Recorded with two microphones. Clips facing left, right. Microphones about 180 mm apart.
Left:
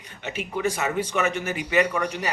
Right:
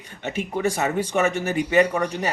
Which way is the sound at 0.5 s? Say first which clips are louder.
Right 2 dB; 40° right (ahead or behind).